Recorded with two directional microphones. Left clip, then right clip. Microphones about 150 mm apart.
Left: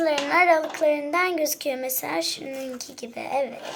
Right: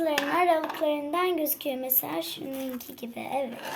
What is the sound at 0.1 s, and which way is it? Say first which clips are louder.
A child's voice: left 5 dB; 60° right (ahead or behind).